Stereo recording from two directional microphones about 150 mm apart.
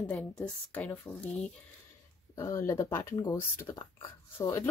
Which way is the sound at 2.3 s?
20° left (ahead or behind).